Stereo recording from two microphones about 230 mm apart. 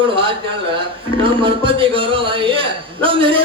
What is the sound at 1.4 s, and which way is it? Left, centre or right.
A man's voice, right.